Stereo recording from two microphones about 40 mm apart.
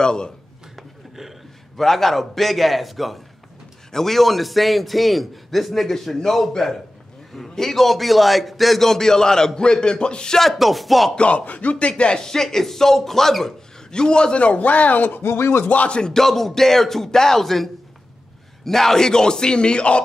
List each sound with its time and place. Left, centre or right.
0.0 s speech: centre
0.7 s a sound: centre
1.8 s a man's voice: centre; by 10.4 s left
10.4 s a man's voice: centre
11.1 s speech: left
12.0 s a man's voice: left
13.9 s speech: left
15.2 s a sound: left
15.6 s speech: left
16.1 s a man's voice: centre; by 20.0 s left